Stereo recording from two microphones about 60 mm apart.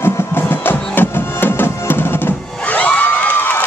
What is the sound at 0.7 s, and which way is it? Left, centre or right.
Music, left.